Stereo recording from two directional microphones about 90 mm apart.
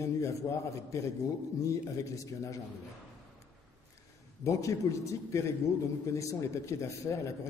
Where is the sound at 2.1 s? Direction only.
35° left (ahead or behind).